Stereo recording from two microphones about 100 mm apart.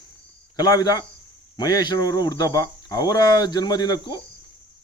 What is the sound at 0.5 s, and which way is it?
Speech, 40° left (ahead or behind).